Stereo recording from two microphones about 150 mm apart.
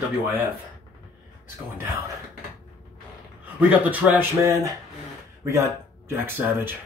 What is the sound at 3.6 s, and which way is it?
Speech, 10° right (ahead or behind).